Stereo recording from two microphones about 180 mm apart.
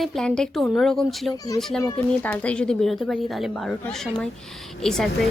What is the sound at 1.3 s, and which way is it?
Speech, 20° left (ahead or behind).